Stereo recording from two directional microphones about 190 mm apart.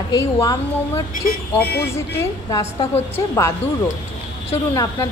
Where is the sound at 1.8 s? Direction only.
15° left (ahead or behind).